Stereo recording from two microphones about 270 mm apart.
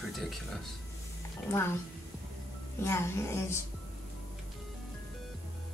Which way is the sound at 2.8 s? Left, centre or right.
Centre.